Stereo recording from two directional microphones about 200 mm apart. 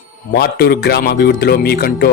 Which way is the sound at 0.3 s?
50° left (ahead or behind).